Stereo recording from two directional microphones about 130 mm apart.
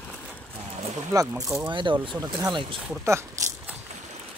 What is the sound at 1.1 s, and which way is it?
Speech, 25° right (ahead or behind).